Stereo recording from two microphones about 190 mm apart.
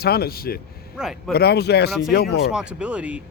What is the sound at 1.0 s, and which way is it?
Speech, centre (ahead or behind).